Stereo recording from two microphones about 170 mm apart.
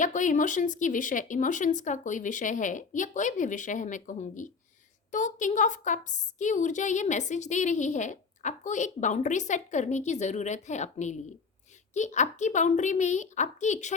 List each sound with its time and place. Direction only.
0.0 s a woman's voice: 50° left (ahead or behind)